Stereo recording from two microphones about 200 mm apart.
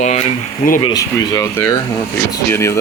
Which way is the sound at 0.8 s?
20° left (ahead or behind).